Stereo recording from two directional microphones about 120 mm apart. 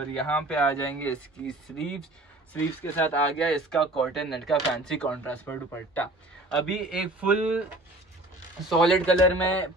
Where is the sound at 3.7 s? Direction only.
Centre (ahead or behind).